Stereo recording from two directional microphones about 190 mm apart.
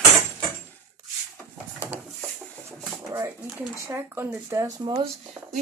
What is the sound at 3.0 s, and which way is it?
Pigeon, 15° right (ahead or behind).